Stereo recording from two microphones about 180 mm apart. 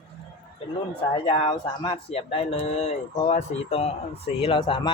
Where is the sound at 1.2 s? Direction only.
30° left (ahead or behind).